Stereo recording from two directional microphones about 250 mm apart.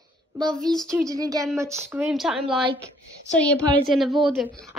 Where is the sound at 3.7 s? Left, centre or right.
Centre.